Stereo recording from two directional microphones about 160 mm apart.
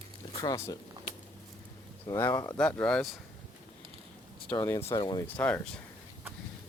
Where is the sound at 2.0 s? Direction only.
15° left (ahead or behind).